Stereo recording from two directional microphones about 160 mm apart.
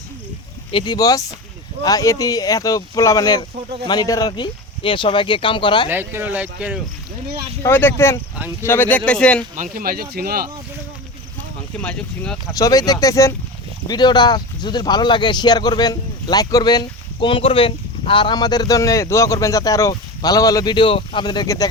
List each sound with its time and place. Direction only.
0.7 s speech: 30° left (ahead or behind)
5.9 s speech: 15° right (ahead or behind)
7.6 s speech: 15° left (ahead or behind)
9.7 s speech: 65° right (ahead or behind)
11.8 s speech: 10° left (ahead or behind)
12.5 s speech: 20° left (ahead or behind)